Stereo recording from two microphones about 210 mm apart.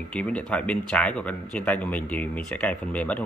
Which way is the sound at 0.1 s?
5° left (ahead or behind).